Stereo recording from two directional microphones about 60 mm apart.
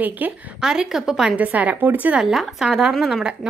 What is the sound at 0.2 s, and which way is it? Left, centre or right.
Speech, right.